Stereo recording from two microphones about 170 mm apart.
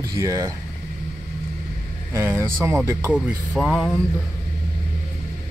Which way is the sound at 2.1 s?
15° right (ahead or behind).